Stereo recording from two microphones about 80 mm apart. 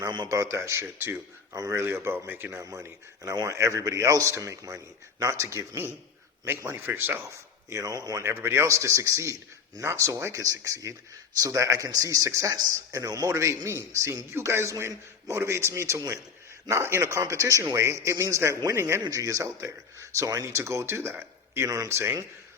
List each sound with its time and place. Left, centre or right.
0.0 s speech: right
0.3 s speech: right
2.6 s a man's voice: right
7.7 s a man's voice: right
8.2 s a man's voice: right